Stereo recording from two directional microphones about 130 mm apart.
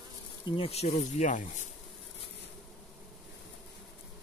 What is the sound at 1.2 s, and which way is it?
Speech, 75° left (ahead or behind).